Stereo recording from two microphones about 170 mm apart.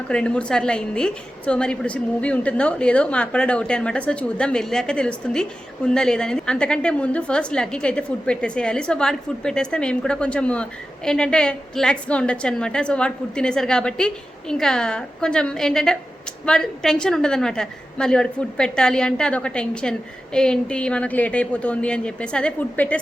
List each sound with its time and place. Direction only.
0.1 s a woman's voice: 5° left (ahead or behind)